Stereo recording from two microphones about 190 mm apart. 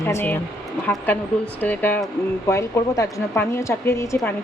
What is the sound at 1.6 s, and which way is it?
A woman's voice, 10° left (ahead or behind).